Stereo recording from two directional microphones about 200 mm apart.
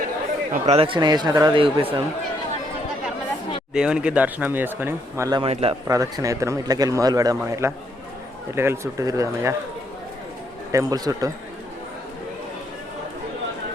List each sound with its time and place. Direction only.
0.6 s speech: 25° right (ahead or behind)
3.8 s a man's voice: 5° right (ahead or behind)
5.4 s speech: 30° right (ahead or behind)
5.9 s a man's voice: 15° right (ahead or behind)
10.7 s a man's voice: 15° right (ahead or behind)